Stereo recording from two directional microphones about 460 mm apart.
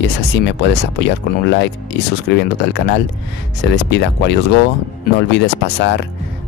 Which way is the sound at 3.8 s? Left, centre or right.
Left.